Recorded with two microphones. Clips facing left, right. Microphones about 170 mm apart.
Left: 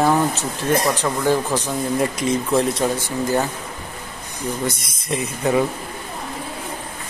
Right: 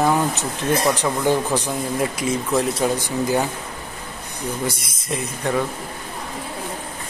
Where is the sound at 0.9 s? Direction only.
15° right (ahead or behind).